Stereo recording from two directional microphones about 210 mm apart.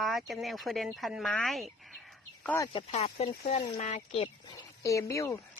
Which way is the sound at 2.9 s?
30° left (ahead or behind).